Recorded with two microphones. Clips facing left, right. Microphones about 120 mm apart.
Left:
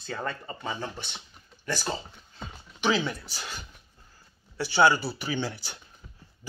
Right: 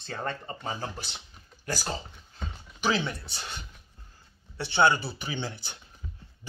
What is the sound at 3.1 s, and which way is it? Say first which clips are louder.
Speech: left 2 dB; 25° right (ahead or behind).